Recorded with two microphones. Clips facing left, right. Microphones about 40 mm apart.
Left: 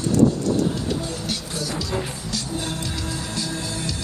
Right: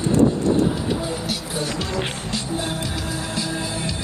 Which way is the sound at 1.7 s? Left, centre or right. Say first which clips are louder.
Right 2 dB; right.